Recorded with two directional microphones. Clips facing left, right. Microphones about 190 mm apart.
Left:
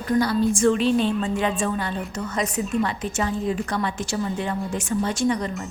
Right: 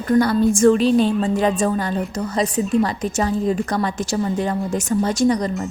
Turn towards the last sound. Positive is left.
turn(degrees=-40)  # may be behind; listen again after turning